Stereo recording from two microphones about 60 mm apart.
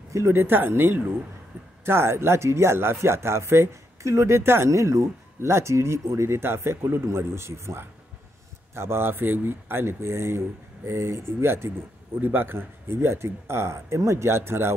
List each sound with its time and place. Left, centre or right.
0.3 s speech: right
12.2 s speech: right